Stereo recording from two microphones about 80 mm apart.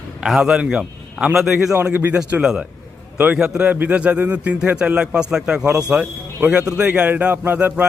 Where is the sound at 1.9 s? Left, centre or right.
Right.